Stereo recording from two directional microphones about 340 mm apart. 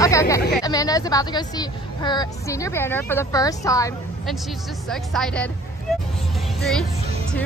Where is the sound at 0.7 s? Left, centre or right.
Centre.